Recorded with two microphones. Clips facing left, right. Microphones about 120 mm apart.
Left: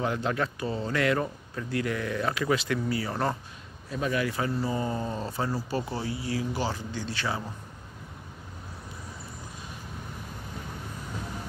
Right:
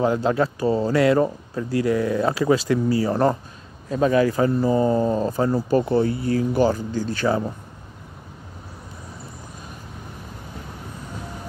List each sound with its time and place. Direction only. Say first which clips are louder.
0.0 s speech: right 8 dB; 30° right (ahead or behind); by 7.4 s 45° right (ahead or behind)